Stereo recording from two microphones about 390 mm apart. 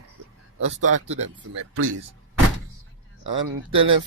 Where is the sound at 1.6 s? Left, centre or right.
Right.